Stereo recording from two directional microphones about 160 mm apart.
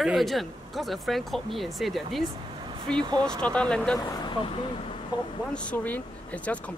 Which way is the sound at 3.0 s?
25° right (ahead or behind).